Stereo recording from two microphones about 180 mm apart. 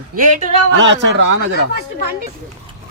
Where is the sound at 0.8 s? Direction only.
90° right.